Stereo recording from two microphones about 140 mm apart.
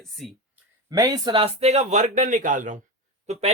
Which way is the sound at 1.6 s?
50° right (ahead or behind).